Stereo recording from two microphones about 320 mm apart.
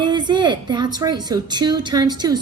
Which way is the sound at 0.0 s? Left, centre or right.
Centre.